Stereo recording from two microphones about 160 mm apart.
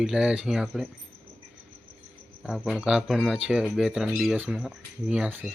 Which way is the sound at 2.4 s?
5° right (ahead or behind).